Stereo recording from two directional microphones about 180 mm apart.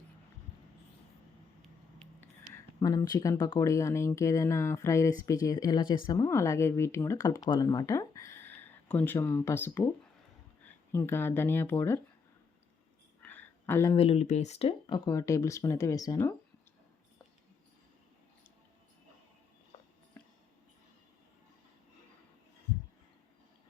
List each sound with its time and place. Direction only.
2.0 s speech: 15° left (ahead or behind)
10.9 s speech: 15° left (ahead or behind)
13.2 s a sound: 10° left (ahead or behind)
13.9 s speech: 35° left (ahead or behind)